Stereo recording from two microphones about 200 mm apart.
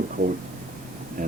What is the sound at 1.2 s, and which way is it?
Speech, 40° right (ahead or behind).